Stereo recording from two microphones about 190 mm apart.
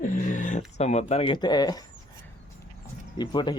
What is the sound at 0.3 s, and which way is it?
Speech, 40° left (ahead or behind).